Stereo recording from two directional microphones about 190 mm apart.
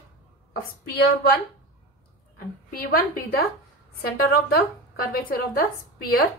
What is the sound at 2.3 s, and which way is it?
A woman's voice, 50° left (ahead or behind).